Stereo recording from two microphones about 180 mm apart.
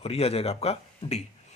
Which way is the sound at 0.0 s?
35° left (ahead or behind).